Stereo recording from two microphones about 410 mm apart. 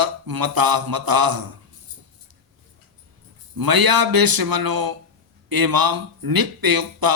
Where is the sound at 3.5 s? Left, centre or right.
Right.